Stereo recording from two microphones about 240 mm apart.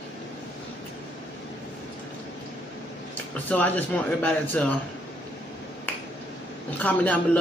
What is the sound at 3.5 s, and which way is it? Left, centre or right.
Speech, centre.